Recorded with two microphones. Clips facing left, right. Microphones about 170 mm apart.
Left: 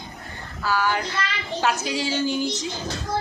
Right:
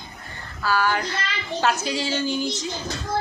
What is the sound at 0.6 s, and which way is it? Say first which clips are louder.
Child singing: right 1 dB; 15° left (ahead or behind).